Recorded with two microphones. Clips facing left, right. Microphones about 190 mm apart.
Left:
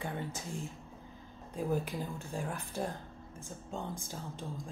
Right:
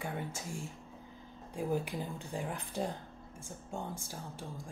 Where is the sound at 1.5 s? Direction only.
15° right (ahead or behind).